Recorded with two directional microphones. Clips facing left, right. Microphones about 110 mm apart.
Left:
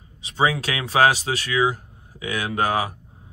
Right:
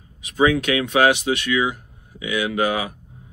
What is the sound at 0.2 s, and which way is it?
Speech, 30° left (ahead or behind).